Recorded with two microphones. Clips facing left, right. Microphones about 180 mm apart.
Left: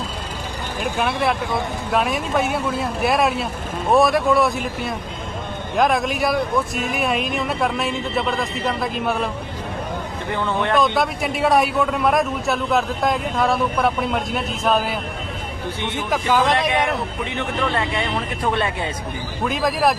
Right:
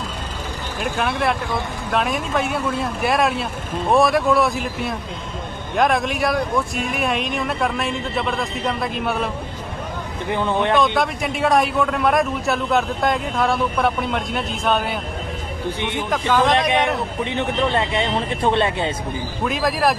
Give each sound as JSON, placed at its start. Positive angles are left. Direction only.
{"t": 0.8, "sound": "a man's voice", "side_deg": 0}
{"t": 10.2, "sound": "speech", "side_deg": -15}
{"t": 10.9, "sound": "a man's voice", "side_deg": 0}
{"t": 16.0, "sound": "a man's voice", "side_deg": 5}
{"t": 16.6, "sound": "speech", "side_deg": -20}
{"t": 19.5, "sound": "a man's voice", "side_deg": 0}